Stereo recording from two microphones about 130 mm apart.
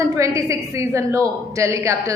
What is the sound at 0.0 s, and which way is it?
A woman's voice, 25° right (ahead or behind).